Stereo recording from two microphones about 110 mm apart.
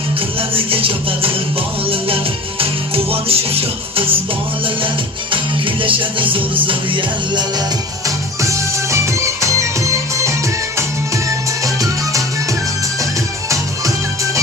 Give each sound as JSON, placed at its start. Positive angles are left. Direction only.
{"t": 0.3, "sound": "music", "side_deg": -55}
{"t": 2.6, "sound": "music", "side_deg": -60}
{"t": 5.3, "sound": "music", "side_deg": -50}
{"t": 8.0, "sound": "music", "side_deg": -30}
{"t": 11.6, "sound": "music", "side_deg": -30}